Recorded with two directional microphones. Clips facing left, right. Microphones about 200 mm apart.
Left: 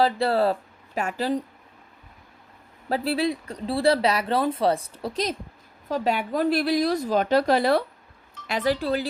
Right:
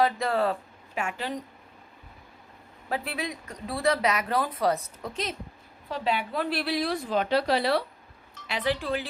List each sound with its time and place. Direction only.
0.0 s speech: 35° left (ahead or behind)
2.9 s a woman's voice: 35° left (ahead or behind)